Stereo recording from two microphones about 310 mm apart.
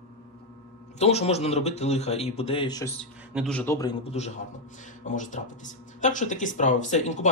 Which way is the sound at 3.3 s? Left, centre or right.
Centre.